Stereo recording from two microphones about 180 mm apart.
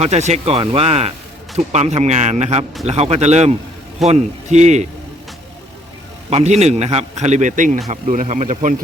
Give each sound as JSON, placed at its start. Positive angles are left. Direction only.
{"t": 0.0, "sound": "a man's voice", "side_deg": -40}
{"t": 6.3, "sound": "a man's voice", "side_deg": -40}